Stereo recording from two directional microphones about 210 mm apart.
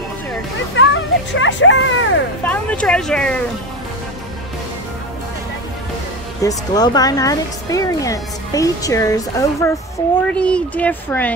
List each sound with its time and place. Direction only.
0.7 s speech: 65° left (ahead or behind)
2.4 s speech: 5° left (ahead or behind)
6.4 s speech: 20° left (ahead or behind)